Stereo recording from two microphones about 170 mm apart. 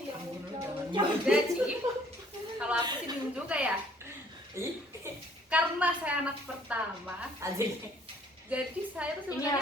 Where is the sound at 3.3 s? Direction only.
5° right (ahead or behind).